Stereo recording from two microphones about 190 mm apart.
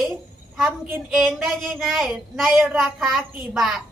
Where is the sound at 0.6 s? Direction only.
Centre (ahead or behind).